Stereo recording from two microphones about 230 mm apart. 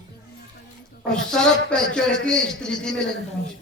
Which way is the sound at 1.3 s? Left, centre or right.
Centre.